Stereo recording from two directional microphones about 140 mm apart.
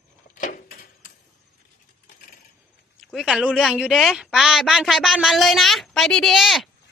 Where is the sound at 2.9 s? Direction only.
Centre (ahead or behind).